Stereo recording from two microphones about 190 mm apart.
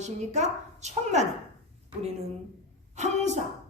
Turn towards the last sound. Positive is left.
turn(degrees=-35)  # may be behind; listen again after turning